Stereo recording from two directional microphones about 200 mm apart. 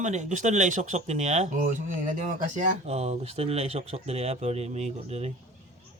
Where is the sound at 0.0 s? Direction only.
35° right (ahead or behind).